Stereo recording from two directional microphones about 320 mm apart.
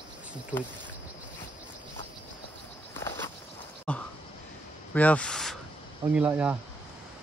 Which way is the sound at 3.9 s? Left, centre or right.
Centre.